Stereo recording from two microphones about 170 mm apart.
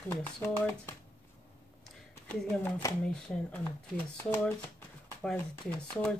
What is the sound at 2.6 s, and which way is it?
Speech, 10° left (ahead or behind).